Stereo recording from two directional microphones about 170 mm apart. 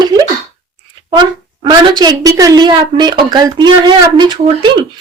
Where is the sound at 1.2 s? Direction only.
25° right (ahead or behind).